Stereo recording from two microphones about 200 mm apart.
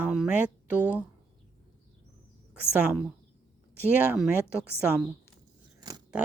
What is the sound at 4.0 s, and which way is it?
Speech, 5° right (ahead or behind).